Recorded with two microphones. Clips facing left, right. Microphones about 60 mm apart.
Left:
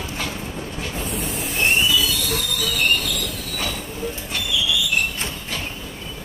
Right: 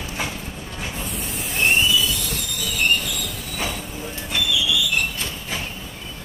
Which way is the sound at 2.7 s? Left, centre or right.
Centre.